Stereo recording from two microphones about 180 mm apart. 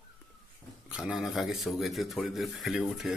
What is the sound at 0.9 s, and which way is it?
Speech, 5° right (ahead or behind).